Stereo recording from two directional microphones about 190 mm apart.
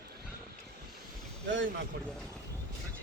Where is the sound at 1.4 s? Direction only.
80° right.